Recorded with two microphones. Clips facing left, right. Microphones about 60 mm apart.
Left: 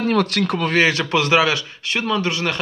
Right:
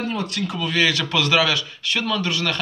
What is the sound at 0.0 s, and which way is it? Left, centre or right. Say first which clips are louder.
Speech: left 7 dB; left.